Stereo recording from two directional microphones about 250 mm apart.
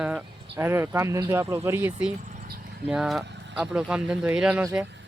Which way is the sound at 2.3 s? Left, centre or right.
Right.